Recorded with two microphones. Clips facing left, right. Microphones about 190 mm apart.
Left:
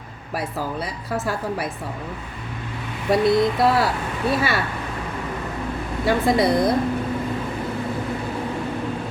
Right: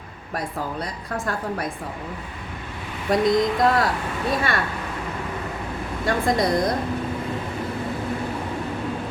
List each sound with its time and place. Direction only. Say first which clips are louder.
0.3 s speech: left 2 dB; 5° left (ahead or behind)
3.1 s speech: left 2 dB; 5° left (ahead or behind)
6.1 s speech: left 3 dB; 5° left (ahead or behind)